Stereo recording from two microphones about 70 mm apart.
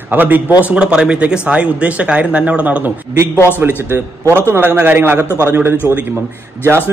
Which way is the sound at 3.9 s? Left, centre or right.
Right.